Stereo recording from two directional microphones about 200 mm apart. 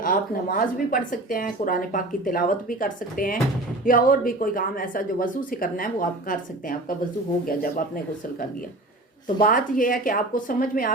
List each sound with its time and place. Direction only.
0.0 s speech: 45° left (ahead or behind)